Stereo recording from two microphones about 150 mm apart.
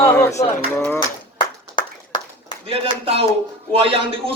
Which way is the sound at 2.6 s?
40° right (ahead or behind).